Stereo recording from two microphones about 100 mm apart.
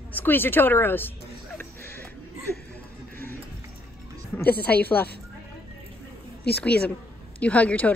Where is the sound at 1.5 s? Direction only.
20° left (ahead or behind).